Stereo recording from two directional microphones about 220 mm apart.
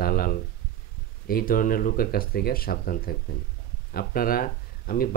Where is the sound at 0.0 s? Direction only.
40° left (ahead or behind).